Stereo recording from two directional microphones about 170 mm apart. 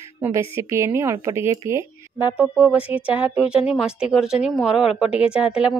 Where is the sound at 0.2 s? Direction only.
15° right (ahead or behind).